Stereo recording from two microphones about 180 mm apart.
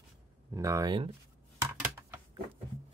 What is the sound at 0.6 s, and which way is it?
Speech, 15° right (ahead or behind).